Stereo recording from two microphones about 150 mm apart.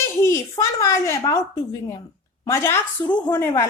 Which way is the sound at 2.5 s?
15° left (ahead or behind).